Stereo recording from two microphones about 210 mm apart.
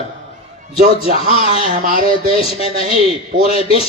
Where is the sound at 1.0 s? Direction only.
30° left (ahead or behind).